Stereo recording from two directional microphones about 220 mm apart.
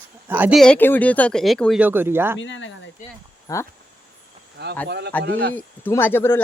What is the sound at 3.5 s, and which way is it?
Speech, 15° left (ahead or behind).